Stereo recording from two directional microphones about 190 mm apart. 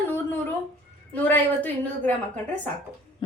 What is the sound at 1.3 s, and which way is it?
Speech, 10° left (ahead or behind).